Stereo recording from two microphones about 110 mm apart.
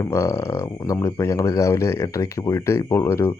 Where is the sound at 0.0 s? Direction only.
25° left (ahead or behind).